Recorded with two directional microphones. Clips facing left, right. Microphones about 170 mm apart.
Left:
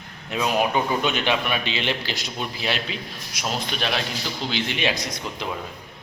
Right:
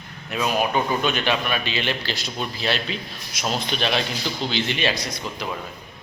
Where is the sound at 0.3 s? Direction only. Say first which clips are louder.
Even; 20° left (ahead or behind).